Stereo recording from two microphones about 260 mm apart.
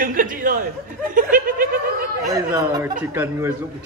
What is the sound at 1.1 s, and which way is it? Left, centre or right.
Snicker, right.